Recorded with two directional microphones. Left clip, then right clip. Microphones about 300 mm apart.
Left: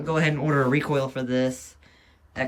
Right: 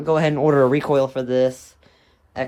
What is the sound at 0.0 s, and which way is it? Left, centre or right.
Speech, centre.